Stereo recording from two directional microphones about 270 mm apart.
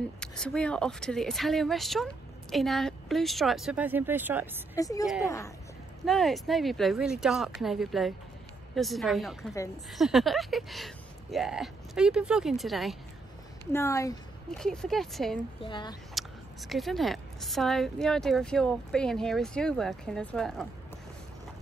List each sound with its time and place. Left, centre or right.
0.2 s speech: centre
4.7 s speech: centre
6.0 s speech: centre
13.7 s speech: centre
15.6 s speech: centre
16.2 s speech: centre